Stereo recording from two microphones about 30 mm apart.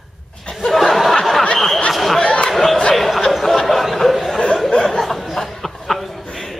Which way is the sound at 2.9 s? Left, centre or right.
Centre.